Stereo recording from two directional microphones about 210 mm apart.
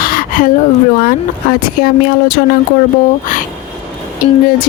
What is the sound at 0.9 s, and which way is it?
Speech, 40° left (ahead or behind).